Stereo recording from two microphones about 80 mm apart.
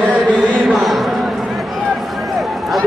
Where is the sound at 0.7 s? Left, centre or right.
Centre.